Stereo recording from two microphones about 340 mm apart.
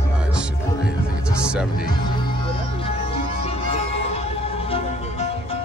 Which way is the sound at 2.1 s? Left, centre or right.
Centre.